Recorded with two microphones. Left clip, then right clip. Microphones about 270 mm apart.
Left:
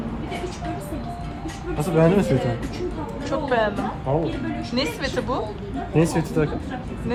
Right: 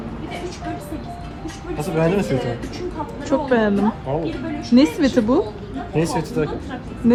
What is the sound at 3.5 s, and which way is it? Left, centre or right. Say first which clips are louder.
Speech: right 2 dB; centre.